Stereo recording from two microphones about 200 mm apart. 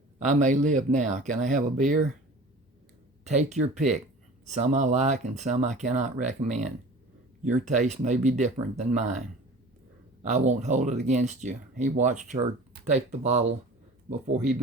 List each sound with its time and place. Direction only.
0.2 s speech: 40° right (ahead or behind)
3.2 s speech: 35° right (ahead or behind)
10.2 s speech: 35° right (ahead or behind)